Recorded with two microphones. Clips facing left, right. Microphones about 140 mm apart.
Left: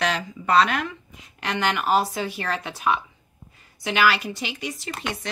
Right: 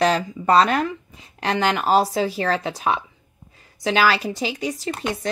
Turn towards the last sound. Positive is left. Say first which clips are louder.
# right 5 dB
turn(degrees=-35)  # may be behind; listen again after turning